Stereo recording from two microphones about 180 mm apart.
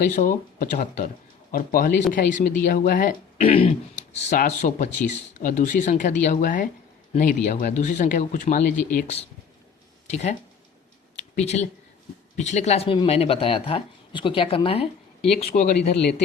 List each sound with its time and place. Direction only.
0.2 s speech: 45° left (ahead or behind)
3.4 s speech: 30° left (ahead or behind); by 9.1 s 50° left (ahead or behind)
10.1 s speech: 40° left (ahead or behind)